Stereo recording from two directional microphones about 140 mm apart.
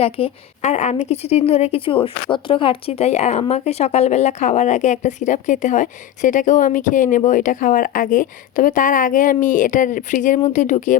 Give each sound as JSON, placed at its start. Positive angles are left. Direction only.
{"t": 0.0, "sound": "a woman's voice", "side_deg": 50}